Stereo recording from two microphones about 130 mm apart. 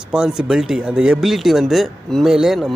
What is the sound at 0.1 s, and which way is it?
Speech, 5° right (ahead or behind).